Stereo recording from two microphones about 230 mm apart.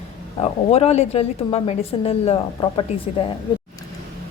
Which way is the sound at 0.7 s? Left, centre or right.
Left.